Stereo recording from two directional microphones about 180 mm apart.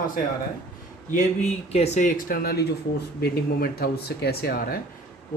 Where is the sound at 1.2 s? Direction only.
35° left (ahead or behind).